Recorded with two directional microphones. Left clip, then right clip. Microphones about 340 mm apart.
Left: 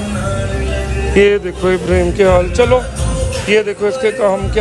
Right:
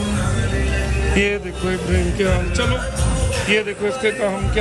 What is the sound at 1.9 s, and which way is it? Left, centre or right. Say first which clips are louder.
A man's voice: left 10 dB; centre.